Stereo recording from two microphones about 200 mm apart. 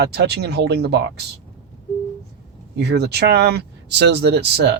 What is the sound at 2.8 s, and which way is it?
Speech, 55° right (ahead or behind).